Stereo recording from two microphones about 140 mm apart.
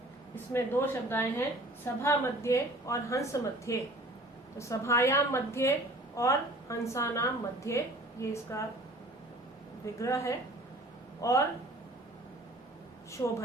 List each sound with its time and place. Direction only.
0.3 s a woman's voice: 15° left (ahead or behind)
9.8 s a woman's voice: 20° left (ahead or behind)
13.2 s a woman's voice: 25° left (ahead or behind)